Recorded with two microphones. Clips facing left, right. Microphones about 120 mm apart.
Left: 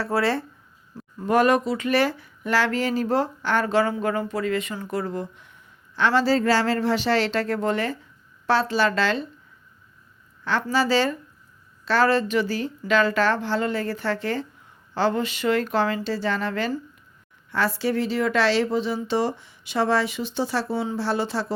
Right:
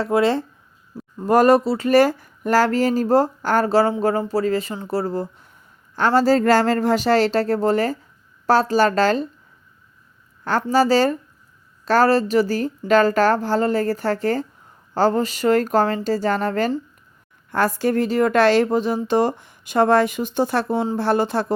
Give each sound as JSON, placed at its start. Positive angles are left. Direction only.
{"t": 0.0, "sound": "speech", "side_deg": -20}
{"t": 1.2, "sound": "speech", "side_deg": -40}
{"t": 10.4, "sound": "speech", "side_deg": -45}